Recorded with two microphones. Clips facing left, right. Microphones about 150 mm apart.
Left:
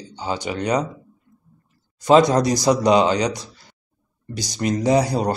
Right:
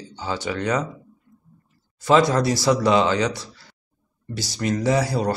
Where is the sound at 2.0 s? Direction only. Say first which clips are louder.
Left 3 dB; 20° left (ahead or behind).